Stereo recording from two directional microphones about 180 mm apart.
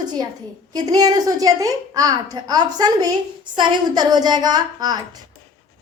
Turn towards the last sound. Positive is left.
turn(degrees=-25)  # may be behind; listen again after turning